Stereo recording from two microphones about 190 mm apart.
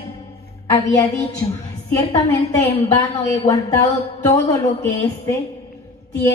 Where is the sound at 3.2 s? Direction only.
15° left (ahead or behind).